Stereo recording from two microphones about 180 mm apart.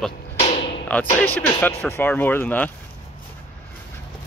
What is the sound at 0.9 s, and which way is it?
Speech, 10° left (ahead or behind).